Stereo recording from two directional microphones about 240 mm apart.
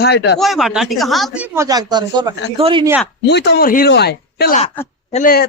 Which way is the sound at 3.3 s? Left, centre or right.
Left.